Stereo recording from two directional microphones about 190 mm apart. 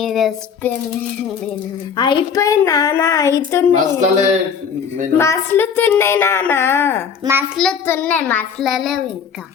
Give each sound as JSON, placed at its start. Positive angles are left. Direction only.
{"t": 0.0, "sound": "a child's voice", "side_deg": 0}
{"t": 2.0, "sound": "a woman's voice", "side_deg": 20}
{"t": 3.8, "sound": "speech", "side_deg": -40}
{"t": 5.1, "sound": "a woman's voice", "side_deg": 15}